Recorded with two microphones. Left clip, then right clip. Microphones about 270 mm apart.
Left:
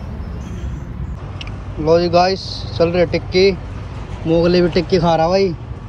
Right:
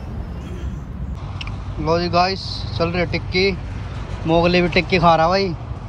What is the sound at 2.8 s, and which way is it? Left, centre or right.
Speech, right.